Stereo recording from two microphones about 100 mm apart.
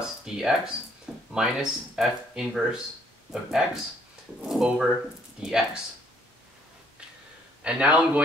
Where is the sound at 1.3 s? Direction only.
5° right (ahead or behind).